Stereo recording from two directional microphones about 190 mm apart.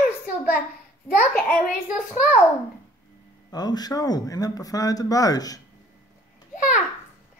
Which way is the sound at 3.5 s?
20° left (ahead or behind).